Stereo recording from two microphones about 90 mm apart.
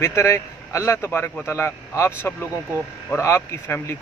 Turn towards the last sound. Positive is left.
turn(degrees=25)  # may be behind; listen again after turning